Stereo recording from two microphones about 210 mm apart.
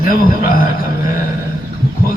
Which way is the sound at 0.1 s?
40° left (ahead or behind).